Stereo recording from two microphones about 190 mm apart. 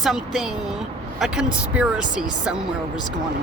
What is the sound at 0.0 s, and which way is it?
Speech, centre (ahead or behind).